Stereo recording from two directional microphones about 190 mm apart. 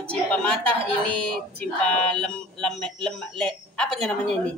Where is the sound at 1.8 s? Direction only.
5° left (ahead or behind).